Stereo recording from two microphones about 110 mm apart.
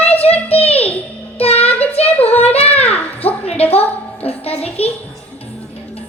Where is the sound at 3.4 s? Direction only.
65° left (ahead or behind).